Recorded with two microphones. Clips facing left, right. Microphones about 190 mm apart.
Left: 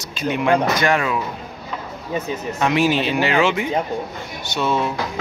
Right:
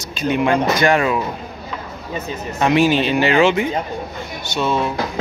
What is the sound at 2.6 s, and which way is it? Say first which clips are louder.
Speech: right 3 dB; 5° left (ahead or behind).